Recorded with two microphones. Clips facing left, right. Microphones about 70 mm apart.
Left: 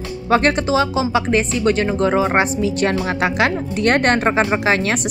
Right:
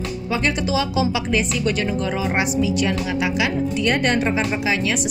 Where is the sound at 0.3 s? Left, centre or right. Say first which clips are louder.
Left 8 dB; left.